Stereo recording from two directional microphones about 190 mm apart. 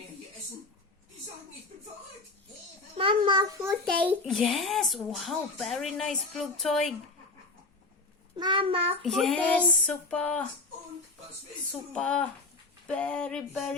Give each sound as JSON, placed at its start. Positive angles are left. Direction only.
{"t": 3.0, "sound": "a sound", "side_deg": -25}
{"t": 4.3, "sound": "speech", "side_deg": 0}
{"t": 8.4, "sound": "a child's voice", "side_deg": -25}
{"t": 9.0, "sound": "speech", "side_deg": 0}
{"t": 11.7, "sound": "speech", "side_deg": 5}